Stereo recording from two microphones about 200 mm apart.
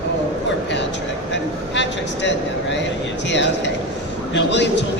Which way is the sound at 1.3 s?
60° left (ahead or behind).